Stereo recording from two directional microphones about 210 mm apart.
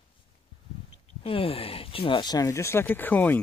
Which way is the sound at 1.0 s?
25° left (ahead or behind).